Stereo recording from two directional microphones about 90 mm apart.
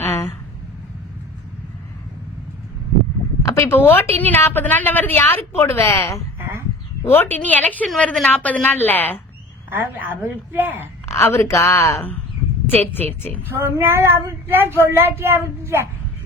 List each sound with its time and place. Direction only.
3.4 s a woman's voice: 30° left (ahead or behind)
7.0 s a woman's voice: 25° left (ahead or behind)
7.9 s a woman's voice: 5° left (ahead or behind)
9.6 s speech: 25° right (ahead or behind)
11.0 s a woman's voice: 30° left (ahead or behind)
12.7 s a woman's voice: 20° left (ahead or behind)
13.5 s speech: 30° right (ahead or behind)